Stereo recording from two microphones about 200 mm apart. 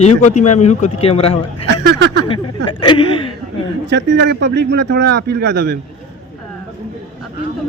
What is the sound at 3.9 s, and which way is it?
Speech, 60° right (ahead or behind).